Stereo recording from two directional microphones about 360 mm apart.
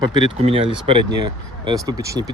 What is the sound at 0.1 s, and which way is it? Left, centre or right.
Speech, centre.